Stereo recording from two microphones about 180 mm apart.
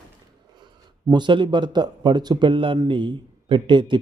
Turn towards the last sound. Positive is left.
turn(degrees=-25)  # may be behind; listen again after turning